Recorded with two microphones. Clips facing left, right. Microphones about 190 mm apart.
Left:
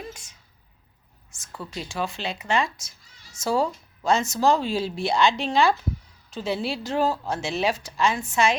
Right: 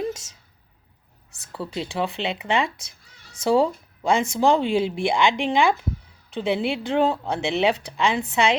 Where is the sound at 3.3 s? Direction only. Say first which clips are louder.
Right 5 dB; 60° right (ahead or behind).